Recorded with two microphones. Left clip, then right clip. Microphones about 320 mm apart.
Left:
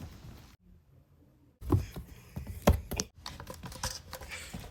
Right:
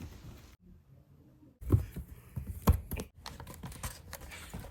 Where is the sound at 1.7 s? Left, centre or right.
Centre.